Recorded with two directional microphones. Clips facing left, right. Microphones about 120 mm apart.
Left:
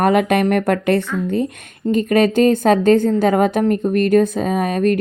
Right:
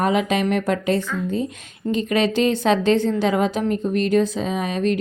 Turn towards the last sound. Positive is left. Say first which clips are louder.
# left 5 dB
turn(degrees=50)  # may be behind; listen again after turning